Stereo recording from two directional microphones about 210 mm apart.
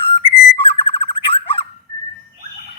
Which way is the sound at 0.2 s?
25° left (ahead or behind).